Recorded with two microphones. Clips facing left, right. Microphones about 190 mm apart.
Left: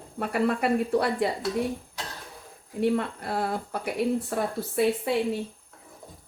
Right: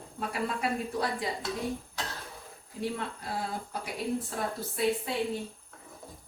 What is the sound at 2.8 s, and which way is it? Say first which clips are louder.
Speech: left 9 dB; 60° left (ahead or behind).